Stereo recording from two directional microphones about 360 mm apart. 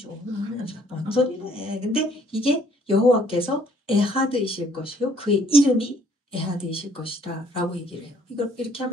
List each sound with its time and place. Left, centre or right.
0.7 s speech: centre